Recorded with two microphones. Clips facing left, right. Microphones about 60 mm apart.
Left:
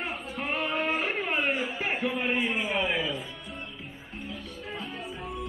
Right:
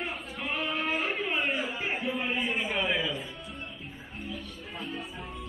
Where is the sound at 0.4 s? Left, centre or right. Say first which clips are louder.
Left 3 dB; left.